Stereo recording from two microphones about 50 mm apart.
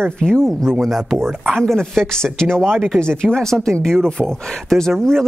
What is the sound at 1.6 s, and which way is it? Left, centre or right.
Speech, centre.